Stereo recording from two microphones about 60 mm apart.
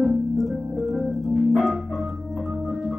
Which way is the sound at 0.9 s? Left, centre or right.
Centre.